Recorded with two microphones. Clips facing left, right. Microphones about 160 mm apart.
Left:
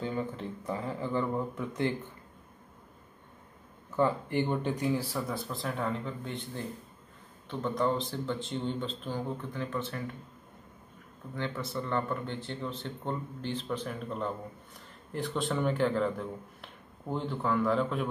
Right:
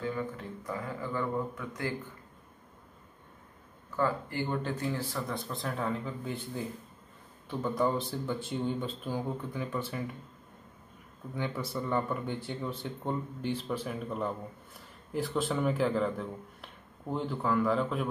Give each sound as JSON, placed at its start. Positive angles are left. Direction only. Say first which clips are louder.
{"t": 0.0, "sound": "speech", "louder": "left 1 dB", "side_deg": 25}
{"t": 3.9, "sound": "speech", "louder": "left 3 dB", "side_deg": 20}
{"t": 11.3, "sound": "speech", "louder": "even", "side_deg": -10}